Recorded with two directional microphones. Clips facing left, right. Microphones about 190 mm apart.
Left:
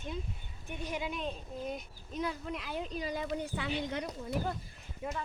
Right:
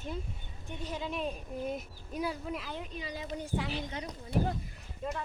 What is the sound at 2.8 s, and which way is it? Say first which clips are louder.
Speech: left 4 dB; 40° left (ahead or behind).